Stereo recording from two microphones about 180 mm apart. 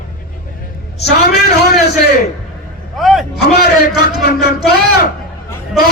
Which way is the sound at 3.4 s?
60° left (ahead or behind).